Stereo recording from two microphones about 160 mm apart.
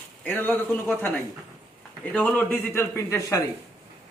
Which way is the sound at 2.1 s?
10° left (ahead or behind).